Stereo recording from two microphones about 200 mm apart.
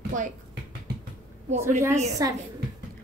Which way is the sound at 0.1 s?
40° right (ahead or behind).